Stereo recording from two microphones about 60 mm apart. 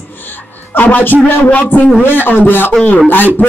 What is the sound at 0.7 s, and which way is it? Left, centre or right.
A man's voice, left.